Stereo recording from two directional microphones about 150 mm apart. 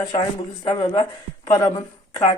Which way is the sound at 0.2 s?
35° left (ahead or behind).